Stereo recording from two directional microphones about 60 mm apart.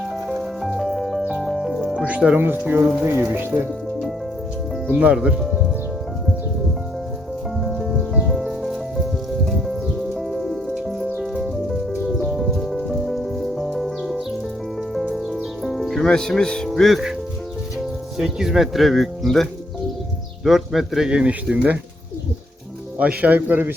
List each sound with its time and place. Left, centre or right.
0.3 s music: centre
1.9 s speech: centre
2.4 s speech: right
4.9 s a man's voice: right
5.1 s speech: centre
7.6 s music: centre
15.6 s music: centre
16.0 s speech: centre
16.7 s speech: centre
18.2 s speech: centre; by 21.8 s right
23.0 s a man's voice: right